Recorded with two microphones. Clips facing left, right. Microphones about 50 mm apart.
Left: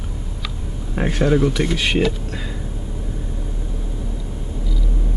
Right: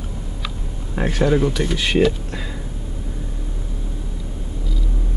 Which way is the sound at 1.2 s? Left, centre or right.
Centre.